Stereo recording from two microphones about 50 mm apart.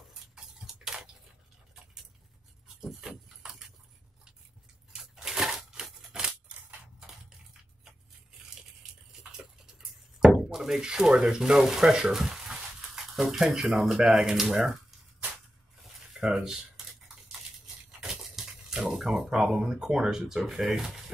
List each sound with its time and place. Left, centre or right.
0.1 s tick-tock: centre
2.8 s a sound: centre
5.1 s a sound: centre
5.9 s scissors: centre
10.3 s speech: centre
16.3 s speech: centre
18.2 s speech: centre